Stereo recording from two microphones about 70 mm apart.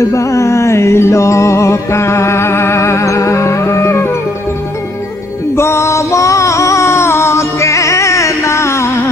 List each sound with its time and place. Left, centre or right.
0.0 s music: left
5.6 s music: left